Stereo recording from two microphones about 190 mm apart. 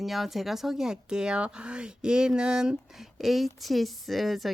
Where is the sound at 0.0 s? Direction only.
Centre (ahead or behind).